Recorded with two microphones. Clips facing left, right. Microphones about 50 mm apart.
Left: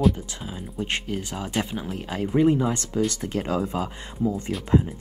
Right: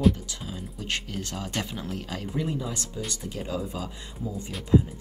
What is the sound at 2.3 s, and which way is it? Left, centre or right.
Speech, left.